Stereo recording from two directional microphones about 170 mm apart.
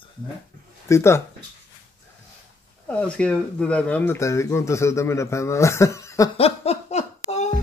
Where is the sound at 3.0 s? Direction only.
5° left (ahead or behind).